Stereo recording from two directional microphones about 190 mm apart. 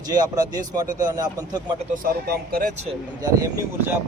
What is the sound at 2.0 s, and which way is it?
Speech, 55° right (ahead or behind).